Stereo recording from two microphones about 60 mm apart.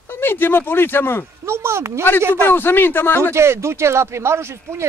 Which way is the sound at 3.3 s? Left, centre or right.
Right.